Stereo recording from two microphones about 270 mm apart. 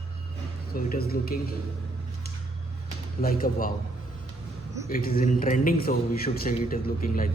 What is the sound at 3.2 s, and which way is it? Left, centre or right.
Speech, left.